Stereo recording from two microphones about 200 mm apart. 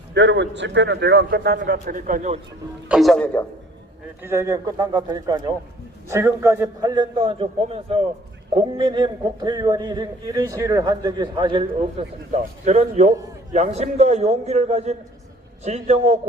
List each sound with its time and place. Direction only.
0.1 s a man's voice: 60° right (ahead or behind); by 2.4 s 40° right (ahead or behind)
2.9 s a man's voice: centre (ahead or behind)
4.2 s a man's voice: 15° right (ahead or behind); by 16.1 s 35° right (ahead or behind)